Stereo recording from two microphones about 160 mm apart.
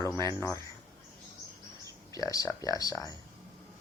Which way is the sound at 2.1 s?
20° left (ahead or behind).